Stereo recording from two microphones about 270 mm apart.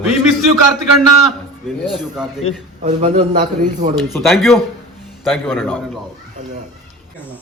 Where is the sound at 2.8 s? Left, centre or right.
Right.